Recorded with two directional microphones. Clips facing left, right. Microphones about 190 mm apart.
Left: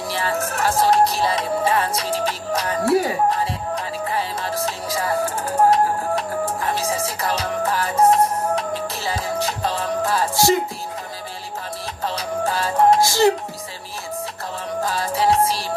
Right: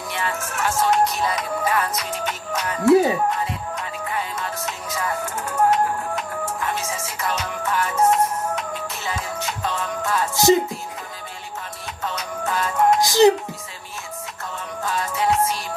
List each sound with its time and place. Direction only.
0.1 s music: 35° left (ahead or behind)
12.0 s music: 35° left (ahead or behind)
13.0 s music: 15° right (ahead or behind)
14.8 s music: 35° left (ahead or behind)